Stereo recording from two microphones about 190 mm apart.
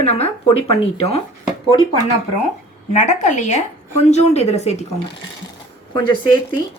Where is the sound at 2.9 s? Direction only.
40° left (ahead or behind).